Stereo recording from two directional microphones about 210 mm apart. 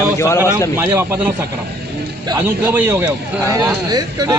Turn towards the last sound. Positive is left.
turn(degrees=-20)  # may be behind; listen again after turning